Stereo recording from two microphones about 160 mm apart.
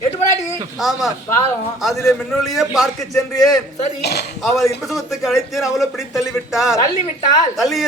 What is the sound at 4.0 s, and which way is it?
Speech, 90° left.